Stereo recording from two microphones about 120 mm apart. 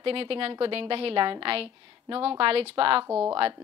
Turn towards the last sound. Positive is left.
turn(degrees=-15)  # may be behind; listen again after turning